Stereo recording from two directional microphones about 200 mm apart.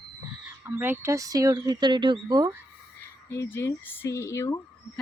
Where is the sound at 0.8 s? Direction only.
10° right (ahead or behind).